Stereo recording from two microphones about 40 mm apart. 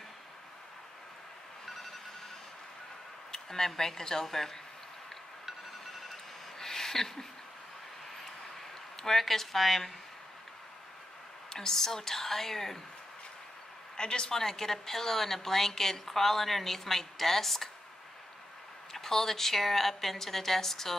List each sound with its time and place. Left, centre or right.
3.3 s speech: centre
6.6 s a sound: centre
9.0 s a woman's voice: centre
11.5 s a woman's voice: centre
13.9 s a man's voice: left
14.3 s a woman's voice: centre
18.9 s a woman's voice: centre